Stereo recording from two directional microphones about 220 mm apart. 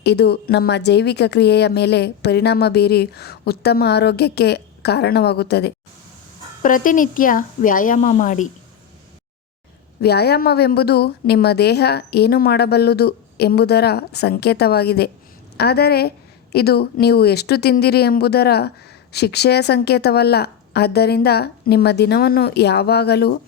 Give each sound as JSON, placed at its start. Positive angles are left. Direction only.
{"t": 0.0, "sound": "a woman's voice", "side_deg": 50}
{"t": 6.6, "sound": "a woman's voice", "side_deg": 35}
{"t": 10.0, "sound": "a woman's voice", "side_deg": 45}